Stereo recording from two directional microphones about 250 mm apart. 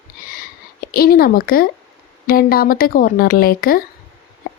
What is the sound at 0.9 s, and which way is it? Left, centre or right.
A woman's voice, left.